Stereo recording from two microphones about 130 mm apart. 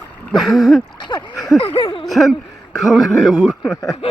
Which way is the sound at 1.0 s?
35° left (ahead or behind).